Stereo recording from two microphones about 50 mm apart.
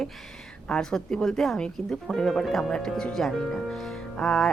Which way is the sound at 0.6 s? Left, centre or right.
Centre.